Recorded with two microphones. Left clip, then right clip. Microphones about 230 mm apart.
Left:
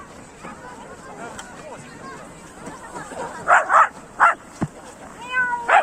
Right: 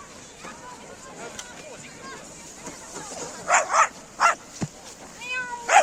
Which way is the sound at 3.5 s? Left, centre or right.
Right.